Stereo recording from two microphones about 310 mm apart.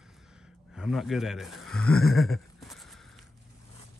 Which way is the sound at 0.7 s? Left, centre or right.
Centre.